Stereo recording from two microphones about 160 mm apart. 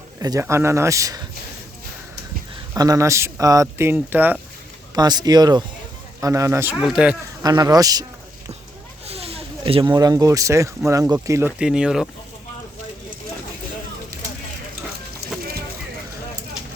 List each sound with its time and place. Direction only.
0.2 s speech: 20° right (ahead or behind)
2.7 s speech: 20° right (ahead or behind)
4.9 s speech: 25° right (ahead or behind); by 7.2 s 5° right (ahead or behind)
7.4 s speech: 25° right (ahead or behind)
9.0 s a sound: 40° right (ahead or behind)
9.8 s speech: 20° right (ahead or behind)
11.6 s speech: 5° right (ahead or behind)